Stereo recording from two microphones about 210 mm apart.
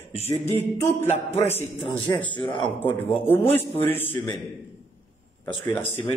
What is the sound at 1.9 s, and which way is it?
Speech, 25° left (ahead or behind).